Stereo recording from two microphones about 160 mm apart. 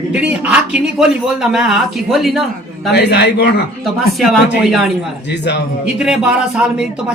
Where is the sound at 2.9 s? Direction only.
90° left.